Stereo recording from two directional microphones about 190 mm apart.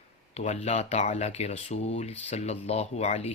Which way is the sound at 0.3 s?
35° left (ahead or behind).